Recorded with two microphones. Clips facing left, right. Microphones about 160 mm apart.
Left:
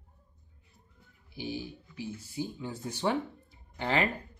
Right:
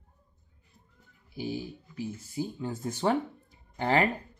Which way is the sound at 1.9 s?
45° right (ahead or behind).